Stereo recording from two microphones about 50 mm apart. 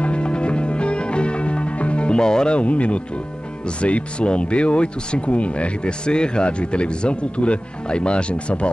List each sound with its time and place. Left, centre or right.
0.0 s music: left
3.8 s speech: left